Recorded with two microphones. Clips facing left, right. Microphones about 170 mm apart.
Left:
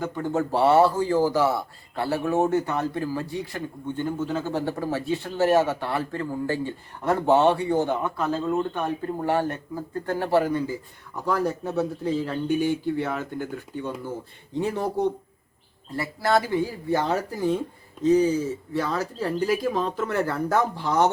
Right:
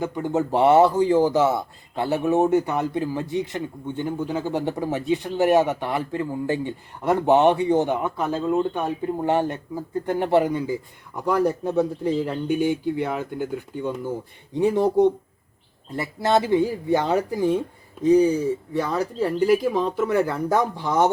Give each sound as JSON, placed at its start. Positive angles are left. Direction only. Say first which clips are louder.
{"t": 0.0, "sound": "speech", "louder": "right 2 dB", "side_deg": -15}